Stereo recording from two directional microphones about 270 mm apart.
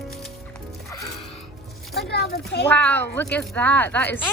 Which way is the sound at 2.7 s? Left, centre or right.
Centre.